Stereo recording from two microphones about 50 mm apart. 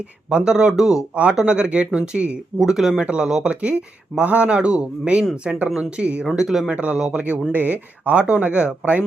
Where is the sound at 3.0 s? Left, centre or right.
Right.